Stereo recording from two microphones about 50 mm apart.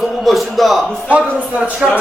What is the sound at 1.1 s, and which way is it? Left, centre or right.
Speech, right.